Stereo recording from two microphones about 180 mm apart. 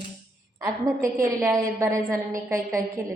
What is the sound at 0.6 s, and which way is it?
A woman's voice, 15° right (ahead or behind).